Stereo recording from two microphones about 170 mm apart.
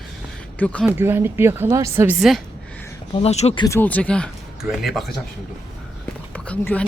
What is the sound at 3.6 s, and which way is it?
Speech, 15° left (ahead or behind).